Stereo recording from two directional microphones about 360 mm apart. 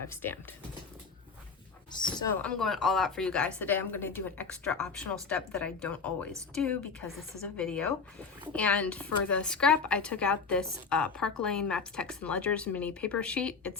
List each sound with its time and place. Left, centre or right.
0.1 s a woman's voice: centre
1.9 s a woman's voice: centre